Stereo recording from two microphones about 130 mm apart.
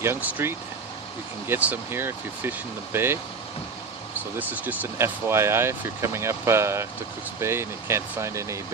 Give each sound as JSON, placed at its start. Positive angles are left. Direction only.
{"t": 0.0, "sound": "speech", "side_deg": -15}
{"t": 4.4, "sound": "speech", "side_deg": -15}